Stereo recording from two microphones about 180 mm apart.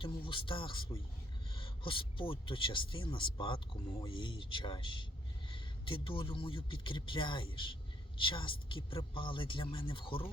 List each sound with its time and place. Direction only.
0.0 s speech: 30° left (ahead or behind)